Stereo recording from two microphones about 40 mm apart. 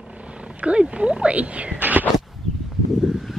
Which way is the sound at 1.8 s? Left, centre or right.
Right.